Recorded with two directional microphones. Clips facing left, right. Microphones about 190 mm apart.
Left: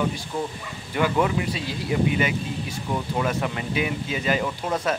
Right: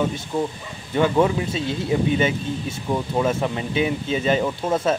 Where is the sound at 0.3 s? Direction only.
20° right (ahead or behind).